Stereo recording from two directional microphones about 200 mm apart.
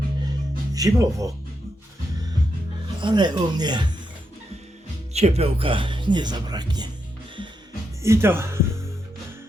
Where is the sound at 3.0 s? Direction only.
20° right (ahead or behind).